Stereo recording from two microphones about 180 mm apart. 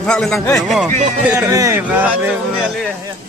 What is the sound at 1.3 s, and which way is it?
Speech, 20° right (ahead or behind).